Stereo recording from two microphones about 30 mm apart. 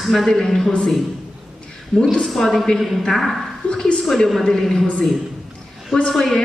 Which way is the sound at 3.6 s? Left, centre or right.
Left.